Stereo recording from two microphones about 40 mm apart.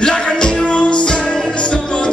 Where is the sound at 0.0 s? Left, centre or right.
Left.